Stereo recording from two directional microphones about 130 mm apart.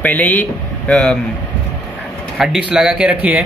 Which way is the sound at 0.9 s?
5° left (ahead or behind).